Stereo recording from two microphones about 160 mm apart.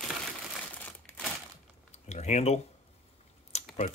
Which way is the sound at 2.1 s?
45° left (ahead or behind).